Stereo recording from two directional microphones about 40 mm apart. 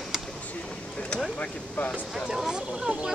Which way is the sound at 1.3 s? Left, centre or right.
Left.